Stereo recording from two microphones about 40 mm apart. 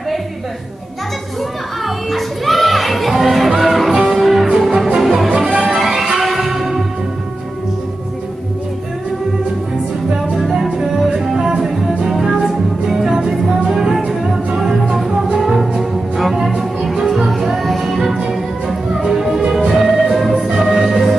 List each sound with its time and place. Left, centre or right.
1.9 s music: centre
10.5 s music: centre